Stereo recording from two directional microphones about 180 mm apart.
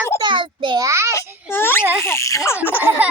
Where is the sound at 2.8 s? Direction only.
10° right (ahead or behind).